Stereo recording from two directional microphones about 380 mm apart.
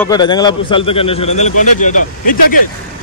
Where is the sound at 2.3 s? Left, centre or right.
Left.